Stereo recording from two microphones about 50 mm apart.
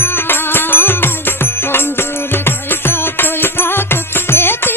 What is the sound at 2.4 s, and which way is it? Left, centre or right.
Music, left.